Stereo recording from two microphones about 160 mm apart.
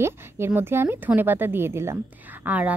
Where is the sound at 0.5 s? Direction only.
15° right (ahead or behind).